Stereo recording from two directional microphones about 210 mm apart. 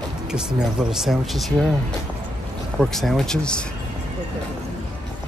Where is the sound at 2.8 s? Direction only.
Centre (ahead or behind).